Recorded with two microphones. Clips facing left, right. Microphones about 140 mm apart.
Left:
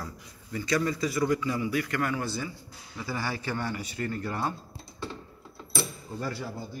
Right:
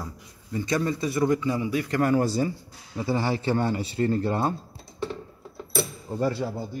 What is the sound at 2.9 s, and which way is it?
A man's voice, 25° right (ahead or behind).